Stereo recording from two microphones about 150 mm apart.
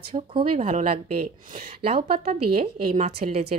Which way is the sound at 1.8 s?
40° right (ahead or behind).